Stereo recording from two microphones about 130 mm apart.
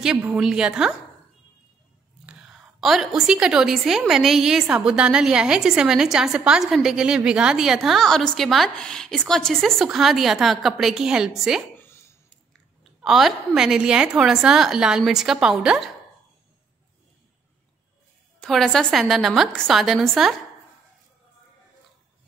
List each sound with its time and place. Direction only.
0.3 s a woman's voice: 5° right (ahead or behind)
2.2 s a woman's voice: centre (ahead or behind)
11.7 s a sound: 20° left (ahead or behind)
12.8 s a woman's voice: centre (ahead or behind)
18.4 s a woman's voice: centre (ahead or behind)